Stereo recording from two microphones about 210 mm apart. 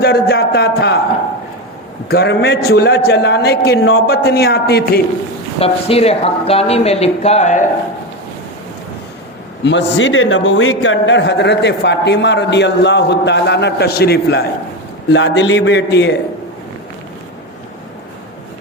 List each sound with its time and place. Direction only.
0.0 s a man's voice: 50° left (ahead or behind)
2.0 s a man's voice: 50° left (ahead or behind)
5.5 s speech: 30° left (ahead or behind)
9.6 s a man's voice: 60° left (ahead or behind)